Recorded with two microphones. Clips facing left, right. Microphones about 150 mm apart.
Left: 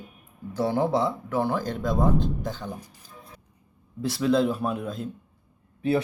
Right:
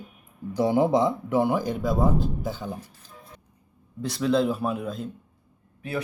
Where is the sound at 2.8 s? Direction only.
10° left (ahead or behind).